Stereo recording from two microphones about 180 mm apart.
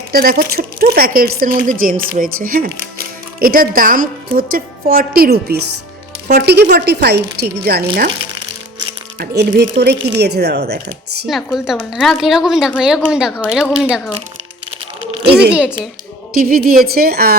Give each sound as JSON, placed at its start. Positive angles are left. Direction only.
{"t": 0.1, "sound": "speech", "side_deg": -55}
{"t": 9.4, "sound": "speech", "side_deg": -65}
{"t": 11.3, "sound": "a woman's voice", "side_deg": 0}
{"t": 15.2, "sound": "speech", "side_deg": -65}
{"t": 16.3, "sound": "speech", "side_deg": -50}